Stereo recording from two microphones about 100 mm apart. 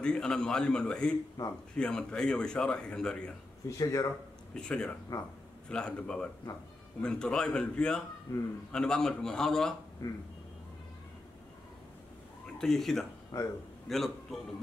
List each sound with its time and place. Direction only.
0.0 s a man's voice: 10° left (ahead or behind)
1.4 s speech: 30° left (ahead or behind)
1.8 s a man's voice: 10° left (ahead or behind)
3.6 s speech: 35° left (ahead or behind)
4.6 s a man's voice: 10° left (ahead or behind)
8.3 s a man's voice: 30° left (ahead or behind)
8.7 s a man's voice: 5° left (ahead or behind)
10.0 s speech: 30° left (ahead or behind)
12.5 s a man's voice: 5° left (ahead or behind)
13.3 s a man's voice: 40° left (ahead or behind)
13.8 s a man's voice: centre (ahead or behind)